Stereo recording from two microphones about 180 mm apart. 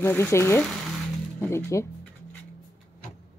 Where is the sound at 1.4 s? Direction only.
15° left (ahead or behind).